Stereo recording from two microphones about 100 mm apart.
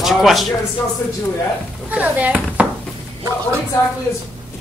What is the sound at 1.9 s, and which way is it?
Speech, 15° right (ahead or behind).